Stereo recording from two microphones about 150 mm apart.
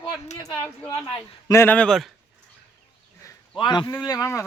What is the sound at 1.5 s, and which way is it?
Speech, 15° left (ahead or behind).